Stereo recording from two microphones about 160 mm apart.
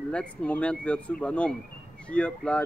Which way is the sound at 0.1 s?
5° left (ahead or behind).